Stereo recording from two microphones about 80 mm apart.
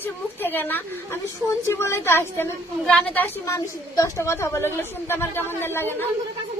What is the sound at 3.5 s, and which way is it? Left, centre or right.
A woman's voice, left.